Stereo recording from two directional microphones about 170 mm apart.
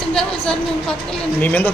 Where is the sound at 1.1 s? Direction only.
10° left (ahead or behind).